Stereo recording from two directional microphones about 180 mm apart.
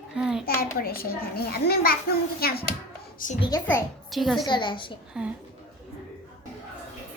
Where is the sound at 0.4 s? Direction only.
55° left (ahead or behind).